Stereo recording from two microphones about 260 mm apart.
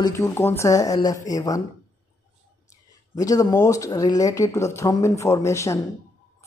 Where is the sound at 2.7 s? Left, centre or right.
Centre.